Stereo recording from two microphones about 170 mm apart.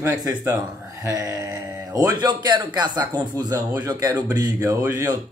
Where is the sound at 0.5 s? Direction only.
20° right (ahead or behind).